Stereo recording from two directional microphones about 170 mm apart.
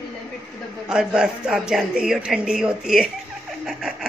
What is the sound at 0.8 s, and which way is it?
Speech, 5° right (ahead or behind).